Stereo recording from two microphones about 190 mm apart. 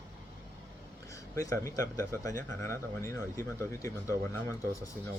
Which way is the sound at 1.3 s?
15° left (ahead or behind).